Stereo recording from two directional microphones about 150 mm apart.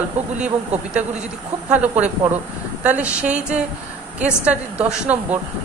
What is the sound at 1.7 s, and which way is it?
A woman's voice, 10° right (ahead or behind).